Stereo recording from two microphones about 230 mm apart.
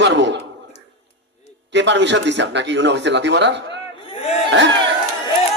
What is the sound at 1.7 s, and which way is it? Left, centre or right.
A man's voice, right.